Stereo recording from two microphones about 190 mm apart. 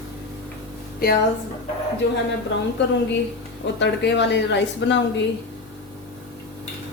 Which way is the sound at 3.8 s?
65° left (ahead or behind).